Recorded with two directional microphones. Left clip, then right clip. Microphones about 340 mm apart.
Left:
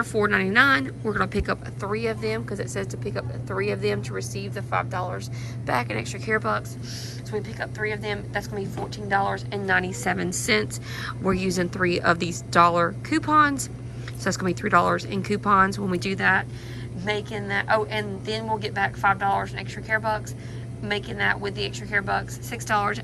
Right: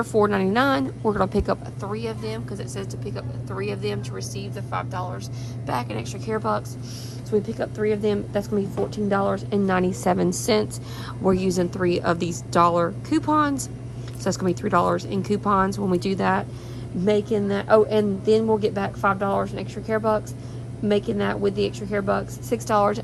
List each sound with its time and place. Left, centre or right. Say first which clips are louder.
0.0 s a woman's voice: right 2 dB; centre
9.5 s a woman's voice: right 1 dB; centre